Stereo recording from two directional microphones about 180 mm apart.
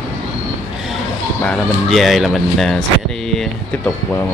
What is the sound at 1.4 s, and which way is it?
Speech, 5° left (ahead or behind).